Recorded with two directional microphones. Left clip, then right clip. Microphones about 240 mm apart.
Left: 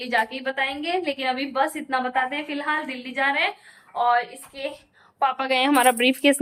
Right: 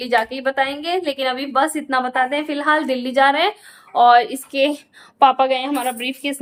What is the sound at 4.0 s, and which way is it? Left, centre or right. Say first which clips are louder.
Speech: right 9 dB; right.